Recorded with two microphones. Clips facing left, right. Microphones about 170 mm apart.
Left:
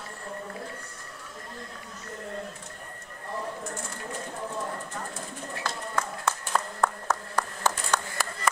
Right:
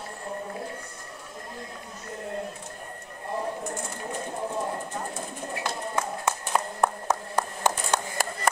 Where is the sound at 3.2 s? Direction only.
20° right (ahead or behind).